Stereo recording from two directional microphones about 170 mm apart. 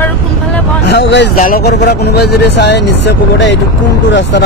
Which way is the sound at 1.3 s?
55° left (ahead or behind).